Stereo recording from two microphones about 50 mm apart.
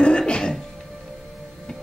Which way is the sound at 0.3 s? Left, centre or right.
Centre.